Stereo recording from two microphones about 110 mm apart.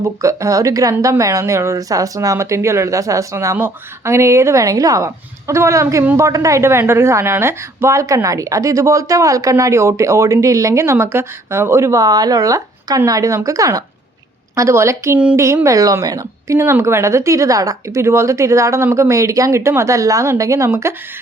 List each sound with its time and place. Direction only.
0.0 s a woman's voice: 30° right (ahead or behind)